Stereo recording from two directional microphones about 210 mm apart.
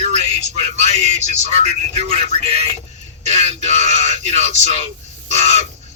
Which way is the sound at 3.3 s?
30° right (ahead or behind).